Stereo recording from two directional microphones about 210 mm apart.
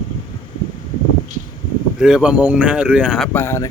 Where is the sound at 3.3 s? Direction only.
10° left (ahead or behind).